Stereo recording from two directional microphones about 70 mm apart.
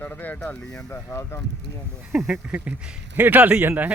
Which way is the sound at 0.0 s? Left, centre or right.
Left.